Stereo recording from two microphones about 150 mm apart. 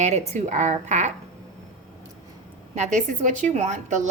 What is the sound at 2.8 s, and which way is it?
A woman's voice, 55° right (ahead or behind).